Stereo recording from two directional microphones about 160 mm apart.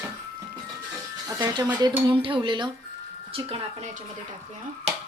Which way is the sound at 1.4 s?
25° right (ahead or behind).